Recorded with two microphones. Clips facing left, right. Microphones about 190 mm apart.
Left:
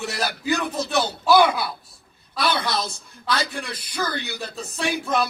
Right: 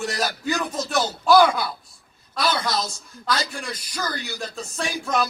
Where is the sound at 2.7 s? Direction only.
60° left (ahead or behind).